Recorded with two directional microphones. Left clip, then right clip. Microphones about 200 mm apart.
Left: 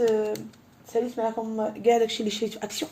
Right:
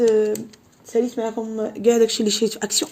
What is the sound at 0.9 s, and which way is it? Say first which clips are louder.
Speech: right 4 dB; 55° right (ahead or behind).